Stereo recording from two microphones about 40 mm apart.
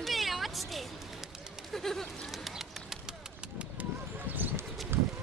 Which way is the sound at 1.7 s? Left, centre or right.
Centre.